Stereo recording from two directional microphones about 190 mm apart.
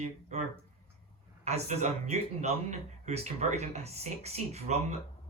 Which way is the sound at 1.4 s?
35° right (ahead or behind).